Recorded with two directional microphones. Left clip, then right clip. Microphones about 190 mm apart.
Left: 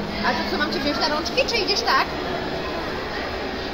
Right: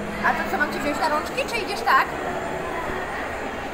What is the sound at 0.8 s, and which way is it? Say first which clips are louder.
Speech: even; 50° left (ahead or behind).